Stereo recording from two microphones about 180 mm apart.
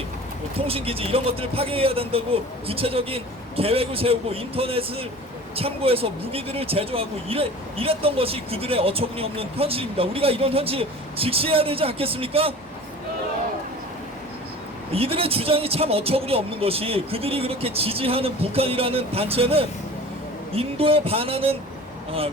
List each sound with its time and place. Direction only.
0.7 s speech: 30° right (ahead or behind)
14.9 s speech: 30° right (ahead or behind)